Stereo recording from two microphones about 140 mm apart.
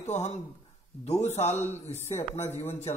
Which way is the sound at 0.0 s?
50° left (ahead or behind).